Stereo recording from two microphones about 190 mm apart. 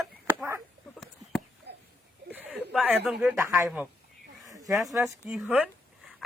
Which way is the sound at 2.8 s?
5° right (ahead or behind).